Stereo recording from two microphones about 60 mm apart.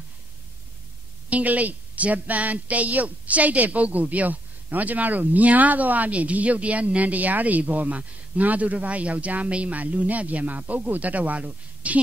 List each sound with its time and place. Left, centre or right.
1.3 s a woman's voice: right